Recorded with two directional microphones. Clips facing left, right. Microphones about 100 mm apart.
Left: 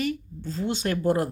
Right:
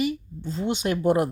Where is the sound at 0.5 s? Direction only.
25° right (ahead or behind).